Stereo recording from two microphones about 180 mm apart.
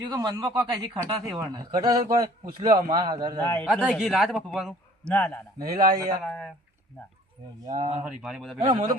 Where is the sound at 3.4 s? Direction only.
10° left (ahead or behind).